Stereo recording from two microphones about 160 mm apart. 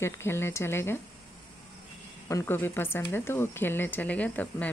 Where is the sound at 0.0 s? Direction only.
15° left (ahead or behind).